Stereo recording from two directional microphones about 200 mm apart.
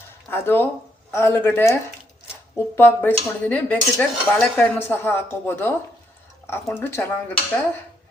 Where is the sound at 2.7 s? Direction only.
10° left (ahead or behind).